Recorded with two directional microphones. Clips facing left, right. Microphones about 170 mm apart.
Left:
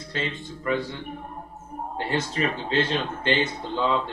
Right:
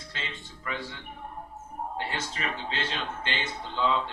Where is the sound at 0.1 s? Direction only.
50° left (ahead or behind).